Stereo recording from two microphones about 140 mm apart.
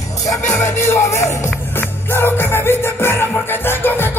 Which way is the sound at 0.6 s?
20° left (ahead or behind).